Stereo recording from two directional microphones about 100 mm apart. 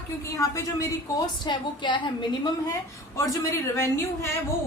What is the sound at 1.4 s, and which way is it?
A woman's voice, 50° left (ahead or behind).